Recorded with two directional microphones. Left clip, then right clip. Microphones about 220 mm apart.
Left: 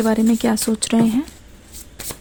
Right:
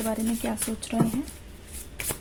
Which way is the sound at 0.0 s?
50° left (ahead or behind).